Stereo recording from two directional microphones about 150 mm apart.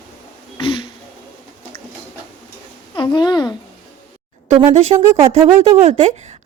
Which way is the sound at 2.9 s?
30° left (ahead or behind).